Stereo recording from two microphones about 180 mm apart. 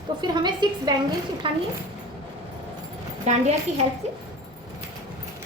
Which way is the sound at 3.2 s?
40° right (ahead or behind).